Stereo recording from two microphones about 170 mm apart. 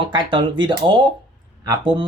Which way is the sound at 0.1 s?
30° right (ahead or behind).